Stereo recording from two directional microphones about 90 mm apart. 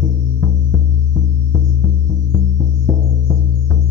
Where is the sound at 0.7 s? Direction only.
Centre (ahead or behind).